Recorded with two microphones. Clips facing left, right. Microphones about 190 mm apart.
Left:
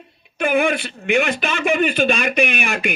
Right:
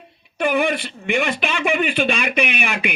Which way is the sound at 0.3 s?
50° left (ahead or behind).